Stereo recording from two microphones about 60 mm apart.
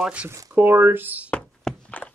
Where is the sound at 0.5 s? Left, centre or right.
Right.